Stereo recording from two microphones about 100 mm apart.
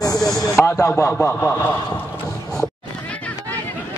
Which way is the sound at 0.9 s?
25° left (ahead or behind).